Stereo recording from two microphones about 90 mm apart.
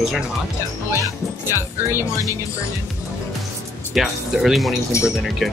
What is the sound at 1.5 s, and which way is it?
Speech, 30° right (ahead or behind).